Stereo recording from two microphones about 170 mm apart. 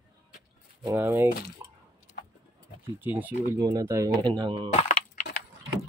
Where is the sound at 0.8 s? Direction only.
15° right (ahead or behind).